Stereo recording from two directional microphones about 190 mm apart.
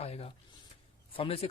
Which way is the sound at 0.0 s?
30° left (ahead or behind).